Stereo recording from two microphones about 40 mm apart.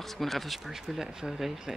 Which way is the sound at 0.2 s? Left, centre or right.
Centre.